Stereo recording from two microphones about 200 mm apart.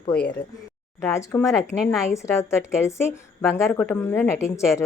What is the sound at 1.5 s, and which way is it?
Speech, centre (ahead or behind).